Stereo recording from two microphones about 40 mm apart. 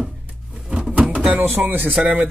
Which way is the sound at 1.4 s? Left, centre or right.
Right.